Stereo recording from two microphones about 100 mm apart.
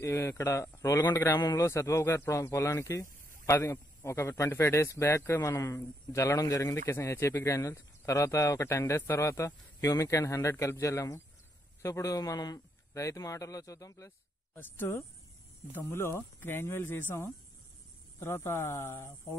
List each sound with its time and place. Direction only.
0.0 s a man's voice: 25° left (ahead or behind)
1.1 s speech: 25° left (ahead or behind)